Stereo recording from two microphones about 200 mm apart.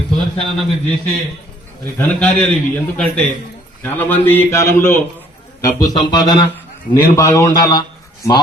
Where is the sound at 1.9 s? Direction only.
5° left (ahead or behind).